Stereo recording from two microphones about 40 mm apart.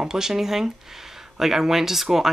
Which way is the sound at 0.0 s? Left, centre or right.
Centre.